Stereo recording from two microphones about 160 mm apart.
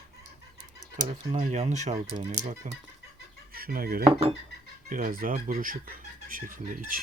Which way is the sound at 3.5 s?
65° right (ahead or behind).